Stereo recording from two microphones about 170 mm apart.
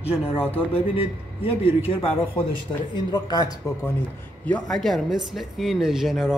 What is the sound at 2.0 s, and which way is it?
A man's voice, 35° left (ahead or behind).